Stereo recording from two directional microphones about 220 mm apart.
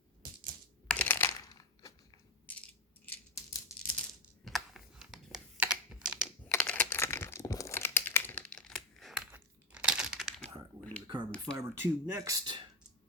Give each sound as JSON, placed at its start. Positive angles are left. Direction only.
{"t": 0.9, "sound": "a sound", "side_deg": 10}
{"t": 3.1, "sound": "scissors", "side_deg": 15}
{"t": 4.4, "sound": "computer keyboard", "side_deg": 0}
{"t": 6.5, "sound": "crumpling", "side_deg": 5}
{"t": 11.0, "sound": "finger snapping", "side_deg": -20}
{"t": 11.5, "sound": "speech", "side_deg": -10}